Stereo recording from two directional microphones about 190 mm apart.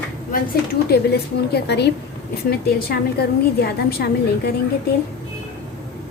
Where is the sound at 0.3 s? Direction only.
55° left (ahead or behind).